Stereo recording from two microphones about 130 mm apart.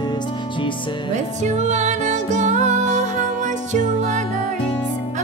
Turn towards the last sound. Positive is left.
turn(degrees=-70)  # may be behind; listen again after turning